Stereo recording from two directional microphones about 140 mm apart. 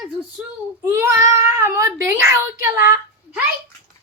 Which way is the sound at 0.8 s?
20° right (ahead or behind).